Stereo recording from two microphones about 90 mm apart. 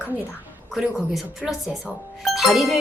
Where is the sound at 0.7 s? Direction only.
5° right (ahead or behind).